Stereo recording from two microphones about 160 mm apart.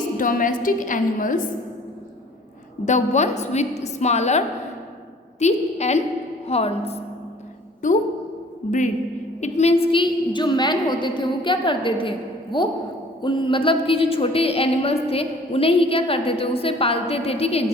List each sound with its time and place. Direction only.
0.2 s a woman's voice: 55° left (ahead or behind)
2.8 s a woman's voice: 50° left (ahead or behind)
7.8 s a woman's voice: 55° left (ahead or behind)
9.4 s a woman's voice: 45° left (ahead or behind)